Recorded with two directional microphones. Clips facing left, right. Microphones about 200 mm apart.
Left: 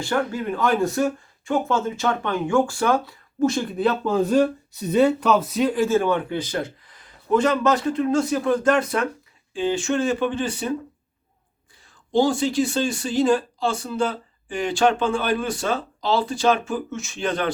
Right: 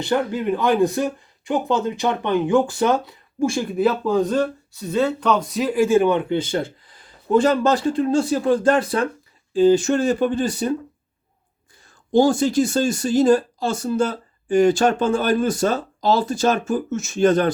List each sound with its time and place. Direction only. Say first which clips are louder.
0.0 s speech: right 3 dB; 20° right (ahead or behind); by 10.8 s 40° right (ahead or behind)
12.1 s speech: right 3 dB; 45° right (ahead or behind)